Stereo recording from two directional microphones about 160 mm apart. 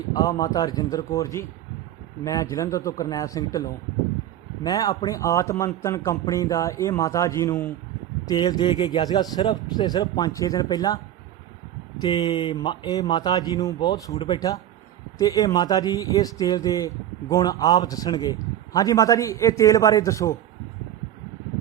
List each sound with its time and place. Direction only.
0.1 s speech: 25° left (ahead or behind)
8.3 s speech: 25° left (ahead or behind)